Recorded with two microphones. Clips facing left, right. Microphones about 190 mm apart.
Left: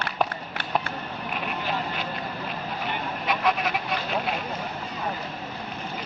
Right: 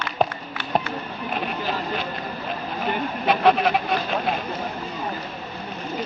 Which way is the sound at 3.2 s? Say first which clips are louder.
Right 7 dB; 30° right (ahead or behind).